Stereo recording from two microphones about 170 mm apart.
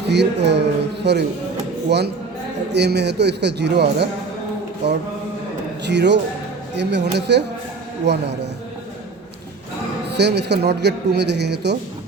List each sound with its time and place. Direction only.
0.1 s a man's voice: 85° right
10.1 s a man's voice: 80° right